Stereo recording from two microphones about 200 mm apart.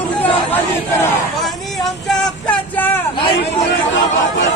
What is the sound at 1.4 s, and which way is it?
Speech, centre (ahead or behind).